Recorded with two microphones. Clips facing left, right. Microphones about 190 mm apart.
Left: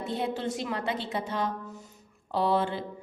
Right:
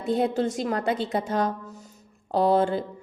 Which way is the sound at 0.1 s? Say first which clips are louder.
Right 8 dB; 45° right (ahead or behind).